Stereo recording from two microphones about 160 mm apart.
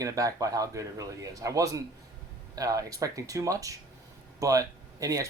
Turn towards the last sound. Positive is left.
turn(degrees=-20)  # may be behind; listen again after turning